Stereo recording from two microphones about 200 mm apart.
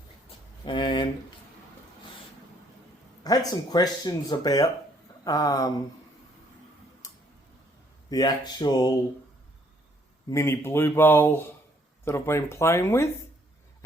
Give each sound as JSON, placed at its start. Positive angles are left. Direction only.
{"t": 0.6, "sound": "speech", "side_deg": 25}
{"t": 3.2, "sound": "speech", "side_deg": 20}
{"t": 7.0, "sound": "tick-tock", "side_deg": 15}
{"t": 8.1, "sound": "speech", "side_deg": 20}
{"t": 10.2, "sound": "speech", "side_deg": 15}